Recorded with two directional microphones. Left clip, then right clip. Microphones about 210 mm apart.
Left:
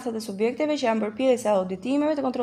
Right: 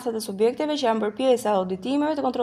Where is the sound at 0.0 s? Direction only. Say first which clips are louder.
Right 4 dB; 25° right (ahead or behind).